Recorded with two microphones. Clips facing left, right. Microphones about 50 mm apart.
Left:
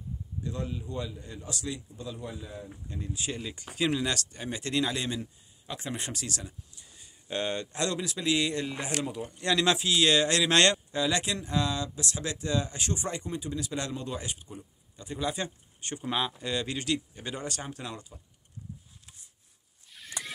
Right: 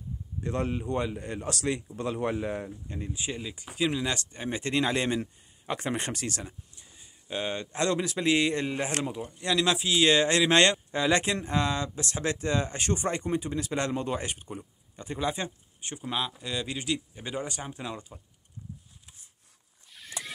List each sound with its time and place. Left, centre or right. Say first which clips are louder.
0.4 s speech: right 6 dB; right
2.9 s speech: left 1 dB; right; by 4.1 s centre
4.1 s speech: right 2 dB; right
7.2 s speech: left 1 dB; centre
7.7 s speech: right 4 dB; right
9.4 s speech: even; centre
9.8 s speech: right 4 dB; centre
10.9 s speech: right 3 dB; right
16.0 s speech: left 1 dB; centre
19.9 s a sound: even; centre